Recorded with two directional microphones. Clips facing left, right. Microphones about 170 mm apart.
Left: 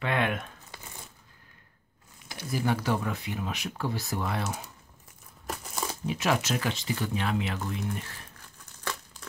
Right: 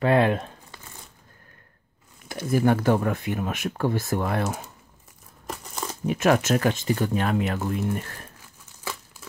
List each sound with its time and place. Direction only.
0.0 s speech: 35° right (ahead or behind)
2.2 s speech: 50° right (ahead or behind)
5.5 s crumpling: 5° left (ahead or behind)
6.0 s speech: 50° right (ahead or behind)
9.2 s crumpling: 5° right (ahead or behind)